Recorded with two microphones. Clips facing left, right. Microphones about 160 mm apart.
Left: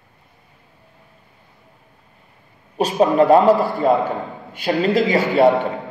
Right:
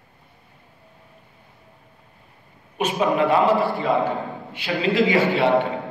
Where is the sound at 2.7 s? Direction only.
40° left (ahead or behind).